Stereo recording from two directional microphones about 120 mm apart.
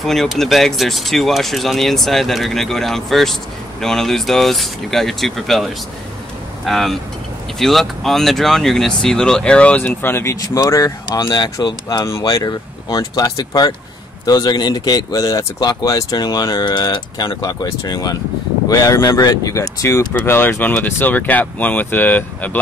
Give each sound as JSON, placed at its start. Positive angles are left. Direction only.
{"t": 0.0, "sound": "speech", "side_deg": 0}